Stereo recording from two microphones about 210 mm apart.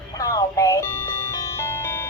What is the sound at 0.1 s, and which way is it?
Music, 15° left (ahead or behind).